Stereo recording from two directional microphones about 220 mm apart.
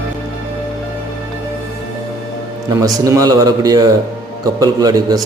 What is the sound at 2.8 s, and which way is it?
A man's voice, 15° right (ahead or behind).